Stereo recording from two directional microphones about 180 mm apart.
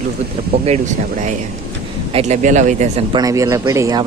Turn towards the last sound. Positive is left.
turn(degrees=-20)  # may be behind; listen again after turning